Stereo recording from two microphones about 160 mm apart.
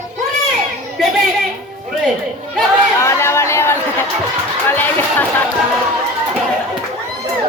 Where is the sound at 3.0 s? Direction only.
15° left (ahead or behind).